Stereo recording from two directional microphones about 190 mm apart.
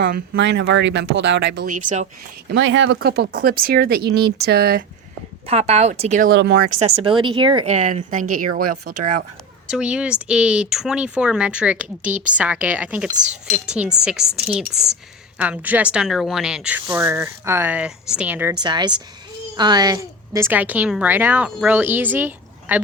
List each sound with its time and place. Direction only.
0.0 s speech: 65° right (ahead or behind)
1.6 s speech: 40° right (ahead or behind)
2.5 s speech: 75° right (ahead or behind); by 4.8 s 55° right (ahead or behind)
5.5 s speech: 30° right (ahead or behind)
6.3 s speech: 60° right (ahead or behind)
7.0 s speech: 25° right (ahead or behind)
7.8 s speech: 40° right (ahead or behind)
9.6 s a woman's voice: 5° right (ahead or behind)
18.6 s a woman's voice: 25° right (ahead or behind)